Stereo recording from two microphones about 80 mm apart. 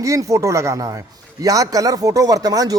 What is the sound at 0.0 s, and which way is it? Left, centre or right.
A man's voice, right.